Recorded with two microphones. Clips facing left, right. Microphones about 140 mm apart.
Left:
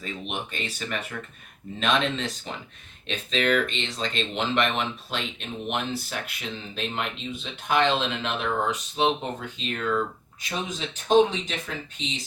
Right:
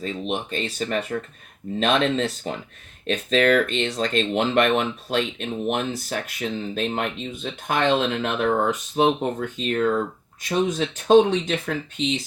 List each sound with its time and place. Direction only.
0.0 s speech: 35° right (ahead or behind)
10.5 s speech: 60° right (ahead or behind)